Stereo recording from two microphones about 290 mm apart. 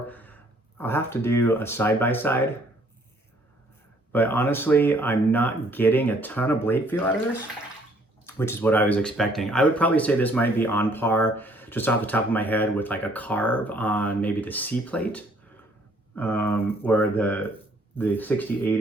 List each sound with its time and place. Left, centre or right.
0.1 s a sound: centre
0.8 s speech: centre
4.1 s speech: centre
8.4 s speech: centre